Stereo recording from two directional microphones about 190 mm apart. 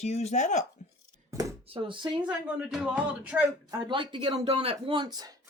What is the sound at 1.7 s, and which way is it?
Speech, 25° right (ahead or behind).